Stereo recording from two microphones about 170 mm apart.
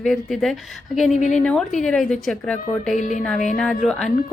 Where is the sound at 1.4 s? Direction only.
5° left (ahead or behind).